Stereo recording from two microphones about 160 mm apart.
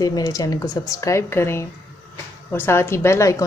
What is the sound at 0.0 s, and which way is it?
A woman's voice, 25° left (ahead or behind).